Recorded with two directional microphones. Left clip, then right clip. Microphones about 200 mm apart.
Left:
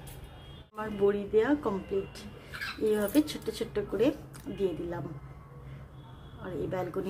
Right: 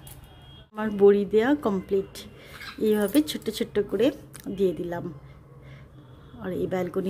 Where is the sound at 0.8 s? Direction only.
45° right (ahead or behind).